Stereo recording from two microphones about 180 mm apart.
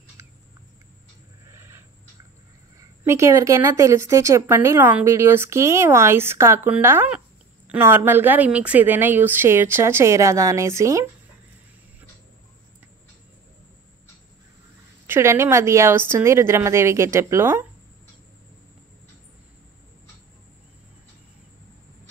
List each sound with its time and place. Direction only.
0.2 s rodents: 15° right (ahead or behind)
1.5 s a sound: 15° right (ahead or behind)
3.0 s a woman's voice: 15° right (ahead or behind)
15.0 s a woman's voice: 15° right (ahead or behind)